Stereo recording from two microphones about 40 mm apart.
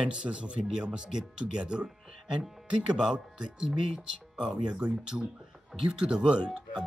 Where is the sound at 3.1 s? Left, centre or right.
Centre.